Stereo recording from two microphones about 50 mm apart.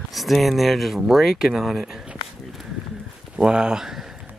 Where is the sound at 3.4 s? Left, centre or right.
Centre.